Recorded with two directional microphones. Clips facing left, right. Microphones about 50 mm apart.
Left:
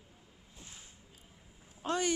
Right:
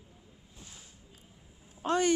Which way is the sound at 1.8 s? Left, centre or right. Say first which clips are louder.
Right 5 dB; centre.